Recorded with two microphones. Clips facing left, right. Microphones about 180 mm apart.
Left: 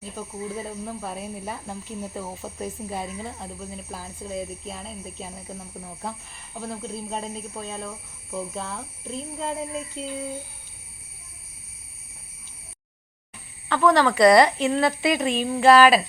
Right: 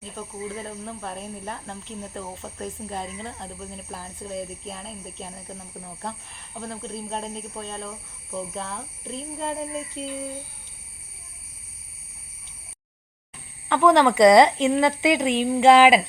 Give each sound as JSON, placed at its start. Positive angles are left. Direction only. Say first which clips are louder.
{"t": 0.0, "sound": "speech", "louder": "left 1 dB", "side_deg": 5}
{"t": 13.7, "sound": "speech", "louder": "right 2 dB", "side_deg": -20}